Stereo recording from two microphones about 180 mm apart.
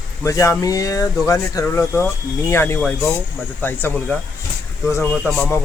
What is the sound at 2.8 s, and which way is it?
Speech, 5° left (ahead or behind).